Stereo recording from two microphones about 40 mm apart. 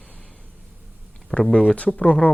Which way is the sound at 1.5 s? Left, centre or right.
Left.